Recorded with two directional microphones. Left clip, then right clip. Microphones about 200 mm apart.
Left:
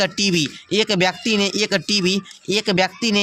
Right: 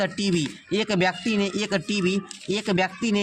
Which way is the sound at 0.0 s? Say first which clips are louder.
Left 6 dB; 15° left (ahead or behind).